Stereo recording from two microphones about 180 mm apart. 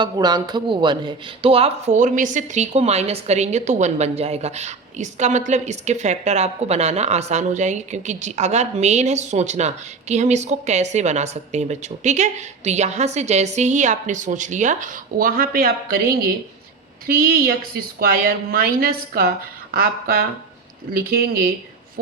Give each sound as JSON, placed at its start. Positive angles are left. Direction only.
{"t": 0.0, "sound": "a woman's voice", "side_deg": -20}